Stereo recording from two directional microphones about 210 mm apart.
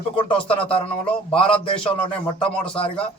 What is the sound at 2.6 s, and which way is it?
Speech, 25° left (ahead or behind).